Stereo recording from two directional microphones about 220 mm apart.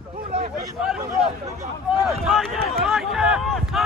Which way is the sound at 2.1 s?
Centre (ahead or behind).